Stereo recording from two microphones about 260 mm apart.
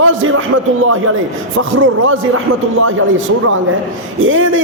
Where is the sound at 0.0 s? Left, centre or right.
Right.